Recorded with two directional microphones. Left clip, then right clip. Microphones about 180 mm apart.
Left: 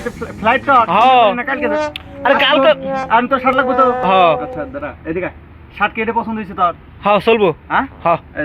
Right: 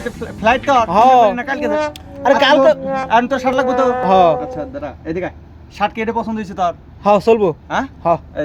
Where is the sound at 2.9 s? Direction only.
Centre (ahead or behind).